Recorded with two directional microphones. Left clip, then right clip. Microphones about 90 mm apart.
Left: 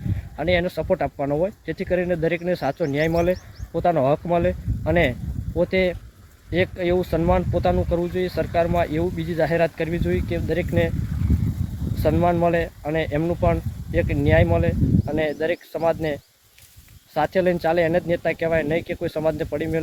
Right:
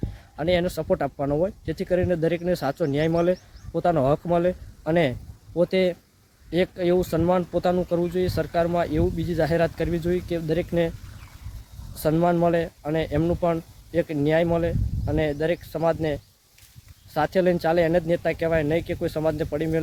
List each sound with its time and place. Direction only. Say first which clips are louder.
0.3 s speech: left 2 dB; 15° right (ahead or behind)
12.0 s speech: left 2 dB; 10° right (ahead or behind)